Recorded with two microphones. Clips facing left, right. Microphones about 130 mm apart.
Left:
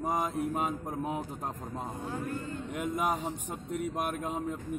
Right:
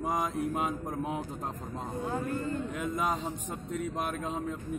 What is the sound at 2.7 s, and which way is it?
A man's voice, 10° left (ahead or behind).